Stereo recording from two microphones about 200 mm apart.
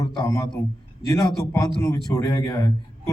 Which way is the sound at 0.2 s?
15° left (ahead or behind).